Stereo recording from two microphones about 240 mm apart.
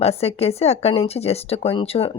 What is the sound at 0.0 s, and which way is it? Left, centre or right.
Speech, left.